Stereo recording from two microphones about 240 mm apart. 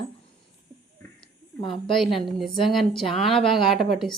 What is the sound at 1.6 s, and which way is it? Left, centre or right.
Speech, left.